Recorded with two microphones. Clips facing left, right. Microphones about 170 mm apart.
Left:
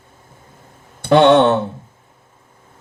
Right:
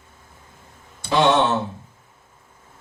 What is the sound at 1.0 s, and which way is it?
Speech, 60° left (ahead or behind).